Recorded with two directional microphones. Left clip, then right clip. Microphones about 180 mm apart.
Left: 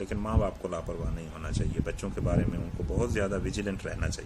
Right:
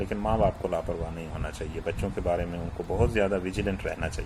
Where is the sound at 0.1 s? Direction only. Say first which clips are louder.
Right 8 dB; 25° left (ahead or behind).